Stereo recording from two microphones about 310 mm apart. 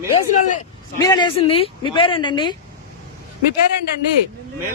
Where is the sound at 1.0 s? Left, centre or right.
Centre.